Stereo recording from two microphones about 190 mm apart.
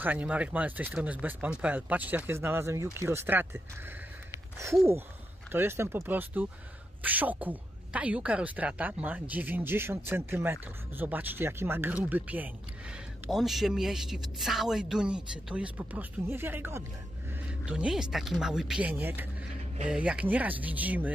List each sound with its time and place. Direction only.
0.0 s speech: 10° right (ahead or behind)
5.5 s a woman's voice: 10° right (ahead or behind)